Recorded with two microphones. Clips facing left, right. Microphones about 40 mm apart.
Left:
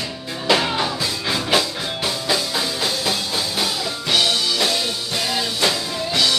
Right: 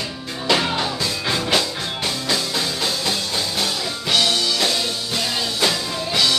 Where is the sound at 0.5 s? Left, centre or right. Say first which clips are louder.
Left 1 dB; centre.